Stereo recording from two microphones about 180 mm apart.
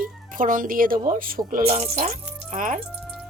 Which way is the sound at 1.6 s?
35° right (ahead or behind).